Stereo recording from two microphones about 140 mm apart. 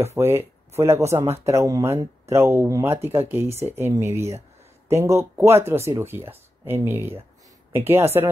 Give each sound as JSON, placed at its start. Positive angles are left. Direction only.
{"t": 0.0, "sound": "speech", "side_deg": -20}